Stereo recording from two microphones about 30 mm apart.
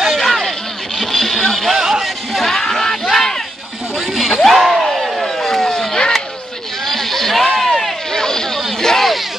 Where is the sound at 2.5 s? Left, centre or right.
Centre.